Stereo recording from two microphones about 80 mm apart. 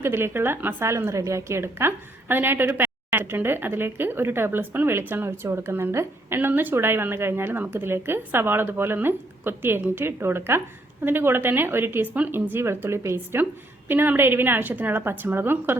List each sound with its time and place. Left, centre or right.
0.0 s a woman's voice: right